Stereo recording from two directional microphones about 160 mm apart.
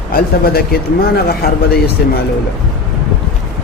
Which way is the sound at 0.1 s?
70° left (ahead or behind).